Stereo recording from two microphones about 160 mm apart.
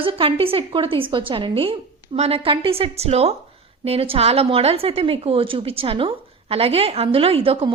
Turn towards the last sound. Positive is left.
turn(degrees=-35)  # may be behind; listen again after turning